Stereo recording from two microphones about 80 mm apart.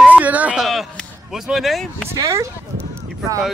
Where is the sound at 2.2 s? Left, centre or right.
Right.